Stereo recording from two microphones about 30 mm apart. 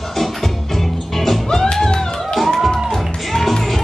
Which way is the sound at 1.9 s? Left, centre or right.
Left.